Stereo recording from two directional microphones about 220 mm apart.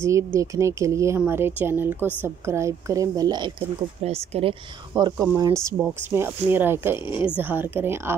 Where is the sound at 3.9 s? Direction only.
30° right (ahead or behind).